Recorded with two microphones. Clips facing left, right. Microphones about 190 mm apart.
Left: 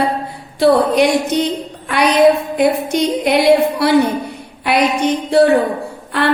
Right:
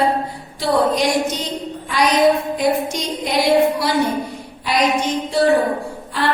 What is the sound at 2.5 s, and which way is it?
A woman's voice, 60° left (ahead or behind).